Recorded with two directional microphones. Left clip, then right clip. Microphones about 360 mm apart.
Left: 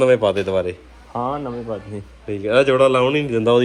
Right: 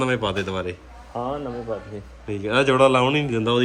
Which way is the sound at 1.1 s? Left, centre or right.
Left.